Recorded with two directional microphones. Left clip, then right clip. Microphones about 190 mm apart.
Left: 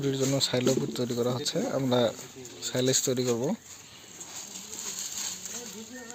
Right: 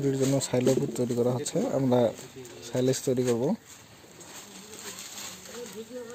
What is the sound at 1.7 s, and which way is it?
Speech, 10° right (ahead or behind).